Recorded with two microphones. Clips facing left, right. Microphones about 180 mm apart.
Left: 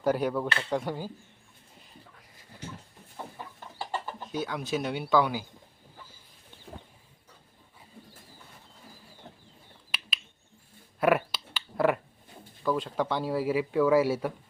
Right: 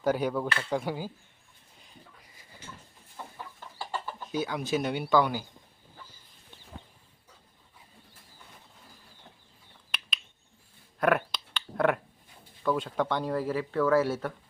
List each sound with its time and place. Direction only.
0.0 s speech: centre (ahead or behind)
3.3 s chicken: 15° left (ahead or behind)
4.3 s speech: centre (ahead or behind)
9.9 s a sound: 5° left (ahead or behind)
11.0 s finger snapping: 5° left (ahead or behind)
12.6 s speech: centre (ahead or behind)